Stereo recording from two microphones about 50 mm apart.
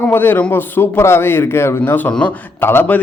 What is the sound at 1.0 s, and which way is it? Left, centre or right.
Speech, left.